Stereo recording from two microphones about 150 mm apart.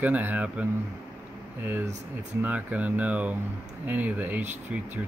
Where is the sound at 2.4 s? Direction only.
10° right (ahead or behind).